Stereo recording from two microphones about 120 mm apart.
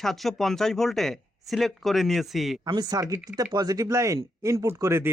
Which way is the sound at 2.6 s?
35° right (ahead or behind).